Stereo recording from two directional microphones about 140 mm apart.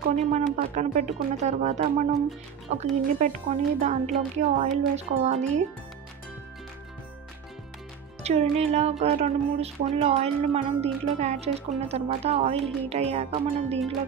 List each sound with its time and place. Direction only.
0.3 s speech: 60° right (ahead or behind)
8.2 s speech: 50° right (ahead or behind)